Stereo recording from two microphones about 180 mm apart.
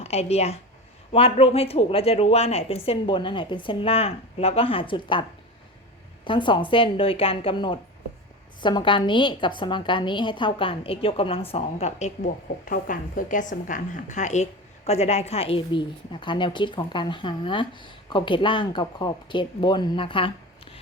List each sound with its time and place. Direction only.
0.0 s a woman's voice: 35° left (ahead or behind)
6.2 s a woman's voice: 25° left (ahead or behind)